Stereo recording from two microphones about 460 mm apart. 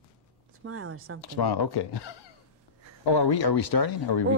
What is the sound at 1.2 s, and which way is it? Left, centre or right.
Speech, left.